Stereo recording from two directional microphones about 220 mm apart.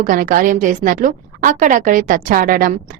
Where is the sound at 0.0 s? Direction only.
40° right (ahead or behind).